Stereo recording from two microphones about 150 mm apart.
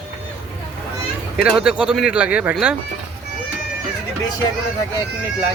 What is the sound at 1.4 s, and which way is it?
Speech, 5° right (ahead or behind).